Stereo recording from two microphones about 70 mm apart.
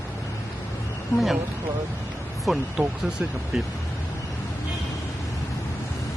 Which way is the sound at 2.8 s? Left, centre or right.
Centre.